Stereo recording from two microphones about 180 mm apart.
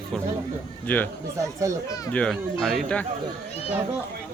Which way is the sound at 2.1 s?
5° left (ahead or behind).